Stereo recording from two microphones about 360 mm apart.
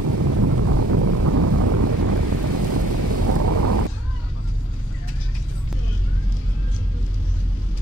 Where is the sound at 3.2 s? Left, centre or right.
Right.